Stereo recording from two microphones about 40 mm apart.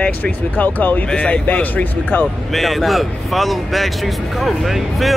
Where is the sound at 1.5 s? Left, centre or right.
Left.